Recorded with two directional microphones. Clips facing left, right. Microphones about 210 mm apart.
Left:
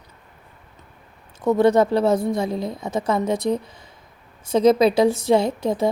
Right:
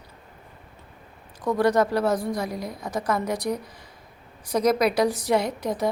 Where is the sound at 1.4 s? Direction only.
25° left (ahead or behind).